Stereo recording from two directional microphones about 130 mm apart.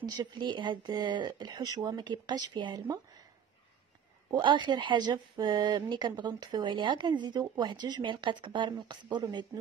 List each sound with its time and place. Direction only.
0.0 s speech: 30° right (ahead or behind)
4.3 s speech: 35° right (ahead or behind)